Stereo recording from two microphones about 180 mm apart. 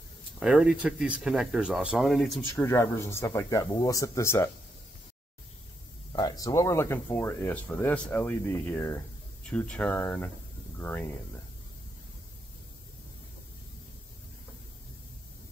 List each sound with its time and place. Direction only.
0.4 s speech: 5° right (ahead or behind)
2.5 s speech: 15° left (ahead or behind)
6.1 s speech: 20° left (ahead or behind)